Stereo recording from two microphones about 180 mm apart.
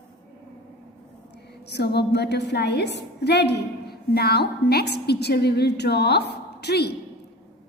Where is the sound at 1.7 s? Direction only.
65° left (ahead or behind).